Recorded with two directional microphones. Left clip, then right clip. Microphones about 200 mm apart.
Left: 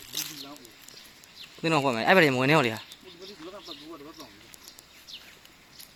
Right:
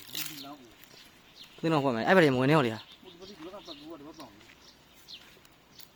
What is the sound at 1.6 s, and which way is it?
Speech, 10° right (ahead or behind).